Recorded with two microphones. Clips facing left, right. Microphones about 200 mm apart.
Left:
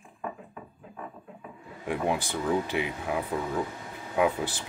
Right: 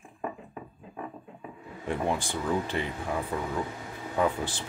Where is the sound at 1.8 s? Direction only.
10° left (ahead or behind).